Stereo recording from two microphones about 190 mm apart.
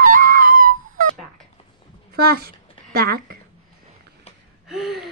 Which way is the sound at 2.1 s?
55° right (ahead or behind).